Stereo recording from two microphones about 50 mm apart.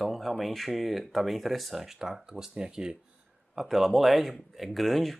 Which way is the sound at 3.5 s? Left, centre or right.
Centre.